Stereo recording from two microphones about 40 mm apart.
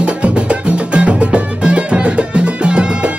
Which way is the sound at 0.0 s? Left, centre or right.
Right.